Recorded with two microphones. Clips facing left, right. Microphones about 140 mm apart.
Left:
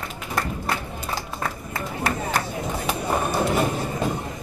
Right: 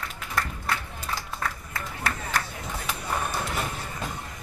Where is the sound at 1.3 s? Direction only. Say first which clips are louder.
Left 4 dB; 20° left (ahead or behind).